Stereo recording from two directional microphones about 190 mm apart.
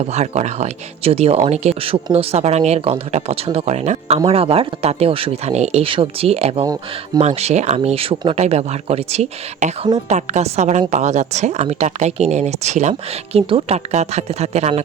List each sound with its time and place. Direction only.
0.0 s a woman's voice: 35° right (ahead or behind)